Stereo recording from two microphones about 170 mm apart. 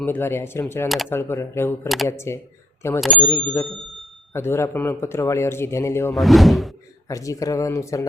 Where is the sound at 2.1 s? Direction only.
15° left (ahead or behind).